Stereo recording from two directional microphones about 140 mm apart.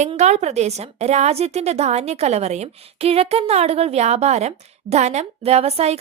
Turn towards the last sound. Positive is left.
turn(degrees=-45)  # may be behind; listen again after turning